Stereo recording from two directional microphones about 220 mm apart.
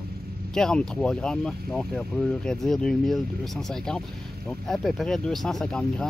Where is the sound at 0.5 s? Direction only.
5° left (ahead or behind).